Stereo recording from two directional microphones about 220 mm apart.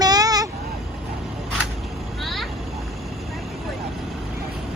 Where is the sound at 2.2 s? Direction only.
Centre (ahead or behind).